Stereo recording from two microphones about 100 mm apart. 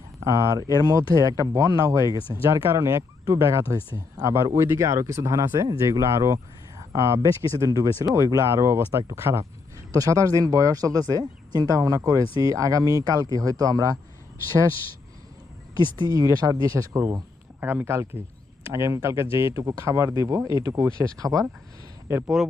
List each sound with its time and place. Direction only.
0.2 s speech: 30° right (ahead or behind)
11.8 s speech: 30° right (ahead or behind)
16.0 s speech: 40° right (ahead or behind)
17.6 s speech: 20° right (ahead or behind); by 21.4 s 35° right (ahead or behind)